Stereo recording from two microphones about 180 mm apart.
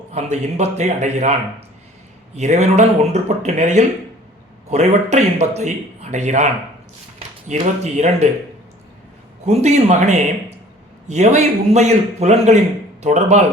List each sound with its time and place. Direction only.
0.1 s a man's voice: 35° right (ahead or behind)
2.3 s a man's voice: 40° right (ahead or behind)
9.5 s a man's voice: 35° right (ahead or behind)